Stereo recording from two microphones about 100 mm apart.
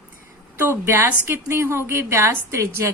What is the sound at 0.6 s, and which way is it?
A woman's voice, 25° right (ahead or behind).